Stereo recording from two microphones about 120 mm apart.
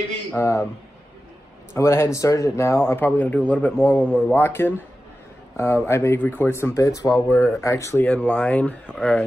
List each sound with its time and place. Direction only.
0.4 s speech: 25° left (ahead or behind)
1.7 s speech: 20° left (ahead or behind)
2.9 s speech: 15° left (ahead or behind)
7.3 s speech: centre (ahead or behind)
7.6 s speech: 25° left (ahead or behind)